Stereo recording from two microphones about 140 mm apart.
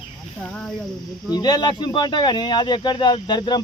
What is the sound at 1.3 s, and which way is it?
Speech, 30° left (ahead or behind).